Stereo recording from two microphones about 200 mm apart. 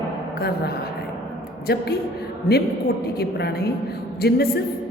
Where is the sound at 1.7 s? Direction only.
50° left (ahead or behind).